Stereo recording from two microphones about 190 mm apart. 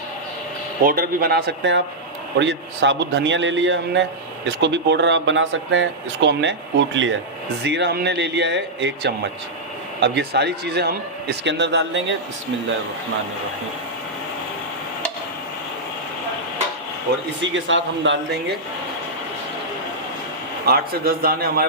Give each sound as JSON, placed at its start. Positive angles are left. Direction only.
{"t": 0.9, "sound": "a man's voice", "side_deg": -50}
{"t": 7.6, "sound": "a man's voice", "side_deg": -65}
{"t": 17.4, "sound": "speech", "side_deg": -75}
{"t": 20.7, "sound": "a man's voice", "side_deg": -55}